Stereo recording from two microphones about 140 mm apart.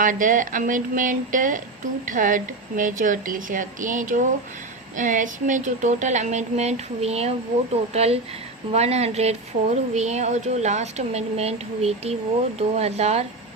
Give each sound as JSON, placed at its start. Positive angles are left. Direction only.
{"t": 0.0, "sound": "a woman's voice", "side_deg": -70}